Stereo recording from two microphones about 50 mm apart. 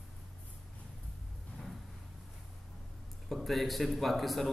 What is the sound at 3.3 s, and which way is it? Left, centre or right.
A man's voice, centre.